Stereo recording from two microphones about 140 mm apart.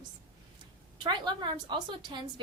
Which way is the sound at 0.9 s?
30° right (ahead or behind).